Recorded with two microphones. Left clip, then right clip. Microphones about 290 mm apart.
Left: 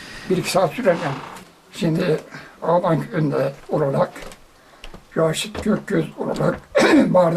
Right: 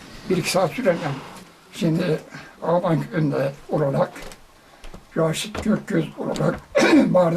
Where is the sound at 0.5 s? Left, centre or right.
Centre.